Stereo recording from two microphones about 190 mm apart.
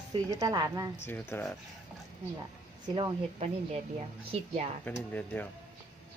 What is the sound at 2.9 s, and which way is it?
Speech, 30° right (ahead or behind).